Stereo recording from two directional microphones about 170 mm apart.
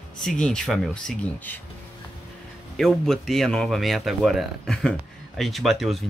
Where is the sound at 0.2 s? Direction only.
5° left (ahead or behind).